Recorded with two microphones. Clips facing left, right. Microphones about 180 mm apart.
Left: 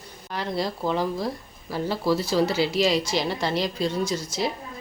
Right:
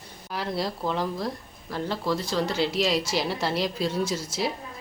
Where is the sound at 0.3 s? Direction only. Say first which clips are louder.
Left 2 dB; centre (ahead or behind).